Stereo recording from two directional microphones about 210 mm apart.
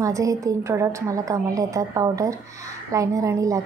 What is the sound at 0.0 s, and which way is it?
A woman's voice, 15° right (ahead or behind).